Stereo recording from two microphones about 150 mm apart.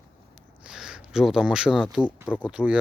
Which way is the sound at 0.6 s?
5° right (ahead or behind).